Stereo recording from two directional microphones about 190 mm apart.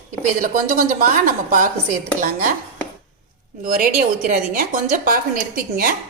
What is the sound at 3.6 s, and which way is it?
A woman's voice, 50° right (ahead or behind).